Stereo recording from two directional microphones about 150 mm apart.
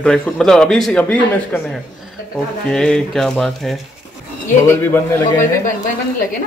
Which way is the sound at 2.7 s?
5° left (ahead or behind).